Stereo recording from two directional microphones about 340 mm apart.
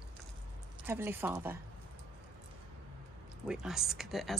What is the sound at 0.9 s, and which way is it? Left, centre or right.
Speech, centre.